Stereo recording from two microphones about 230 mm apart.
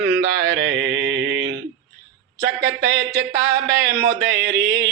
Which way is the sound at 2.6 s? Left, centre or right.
Centre.